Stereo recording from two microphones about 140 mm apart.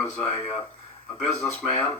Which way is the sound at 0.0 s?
45° left (ahead or behind).